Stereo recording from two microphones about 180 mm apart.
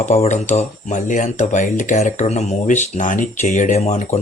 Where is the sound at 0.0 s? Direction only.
40° left (ahead or behind).